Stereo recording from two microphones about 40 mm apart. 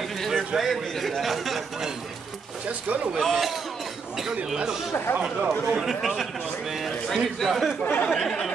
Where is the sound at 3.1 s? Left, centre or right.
Centre.